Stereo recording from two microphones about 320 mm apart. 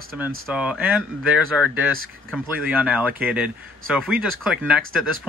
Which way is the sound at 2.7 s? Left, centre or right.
Centre.